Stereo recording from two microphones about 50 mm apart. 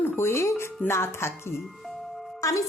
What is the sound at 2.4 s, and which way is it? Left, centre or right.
Speech, left.